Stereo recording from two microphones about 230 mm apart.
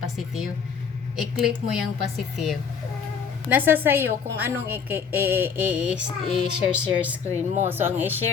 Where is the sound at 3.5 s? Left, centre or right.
Centre.